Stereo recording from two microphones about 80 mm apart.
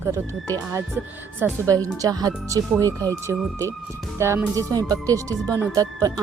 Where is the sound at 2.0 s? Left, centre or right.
Right.